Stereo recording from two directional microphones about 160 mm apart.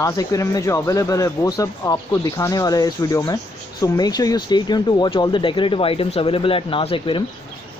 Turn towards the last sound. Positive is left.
turn(degrees=35)  # may be behind; listen again after turning